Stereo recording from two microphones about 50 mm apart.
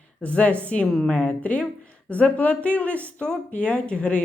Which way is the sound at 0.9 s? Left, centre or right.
Centre.